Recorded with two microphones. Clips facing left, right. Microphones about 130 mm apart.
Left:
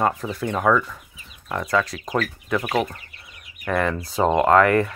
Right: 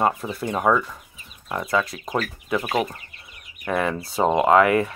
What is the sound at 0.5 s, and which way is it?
Speech, 15° right (ahead or behind).